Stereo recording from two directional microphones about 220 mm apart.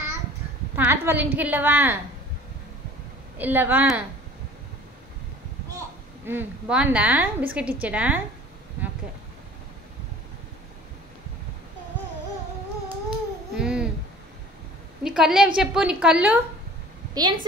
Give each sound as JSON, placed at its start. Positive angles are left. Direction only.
{"t": 0.7, "sound": "a woman's voice", "side_deg": -10}
{"t": 3.3, "sound": "a woman's voice", "side_deg": -10}
{"t": 6.2, "sound": "a woman's voice", "side_deg": -5}
{"t": 13.6, "sound": "a sound", "side_deg": -5}
{"t": 15.0, "sound": "a woman's voice", "side_deg": -5}
{"t": 17.1, "sound": "a woman's voice", "side_deg": -20}